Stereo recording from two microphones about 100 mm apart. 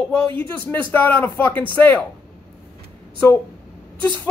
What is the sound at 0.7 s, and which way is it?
Speech, 20° left (ahead or behind).